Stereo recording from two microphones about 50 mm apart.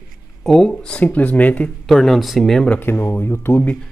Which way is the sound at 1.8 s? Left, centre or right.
Centre.